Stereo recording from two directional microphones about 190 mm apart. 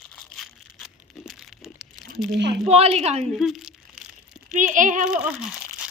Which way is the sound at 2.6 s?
35° right (ahead or behind).